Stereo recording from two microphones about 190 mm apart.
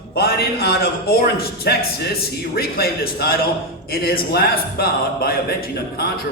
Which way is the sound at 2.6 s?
55° left (ahead or behind).